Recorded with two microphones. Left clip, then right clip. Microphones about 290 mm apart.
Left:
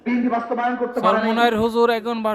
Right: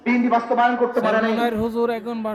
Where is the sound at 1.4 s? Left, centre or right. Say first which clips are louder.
Left 5 dB; left.